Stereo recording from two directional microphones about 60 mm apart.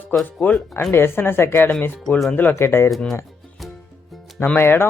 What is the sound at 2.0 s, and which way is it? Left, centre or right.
Speech, centre.